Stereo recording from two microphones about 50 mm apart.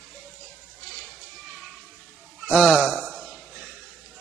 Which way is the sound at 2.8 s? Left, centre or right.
Right.